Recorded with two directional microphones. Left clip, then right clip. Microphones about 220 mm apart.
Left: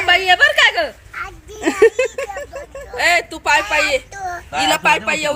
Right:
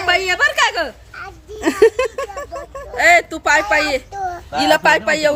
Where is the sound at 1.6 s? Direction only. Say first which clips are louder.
Even; centre (ahead or behind).